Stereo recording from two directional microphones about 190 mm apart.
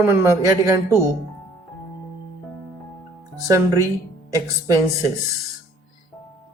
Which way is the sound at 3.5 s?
15° right (ahead or behind).